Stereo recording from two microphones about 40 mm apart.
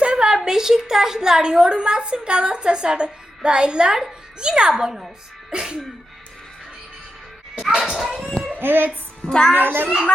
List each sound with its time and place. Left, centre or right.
0.0 s a sound: right
0.4 s a woman's voice: centre
7.7 s speech: centre
8.5 s speech: right
9.3 s a child's voice: centre
9.6 s a child's voice: right